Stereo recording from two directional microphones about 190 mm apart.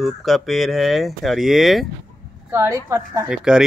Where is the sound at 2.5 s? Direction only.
10° right (ahead or behind).